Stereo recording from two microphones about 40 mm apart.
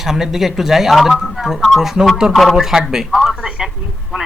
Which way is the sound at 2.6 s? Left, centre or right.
Centre.